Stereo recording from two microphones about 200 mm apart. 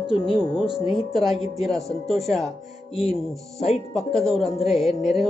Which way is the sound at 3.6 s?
30° left (ahead or behind).